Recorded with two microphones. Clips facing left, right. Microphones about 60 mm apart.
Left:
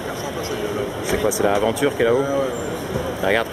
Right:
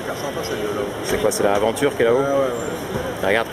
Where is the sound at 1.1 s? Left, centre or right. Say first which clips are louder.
Right 1 dB; centre.